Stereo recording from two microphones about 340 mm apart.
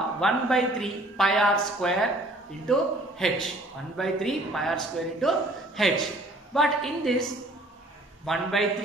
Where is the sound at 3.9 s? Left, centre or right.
Centre.